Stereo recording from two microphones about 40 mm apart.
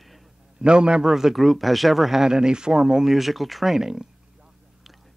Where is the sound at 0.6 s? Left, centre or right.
Right.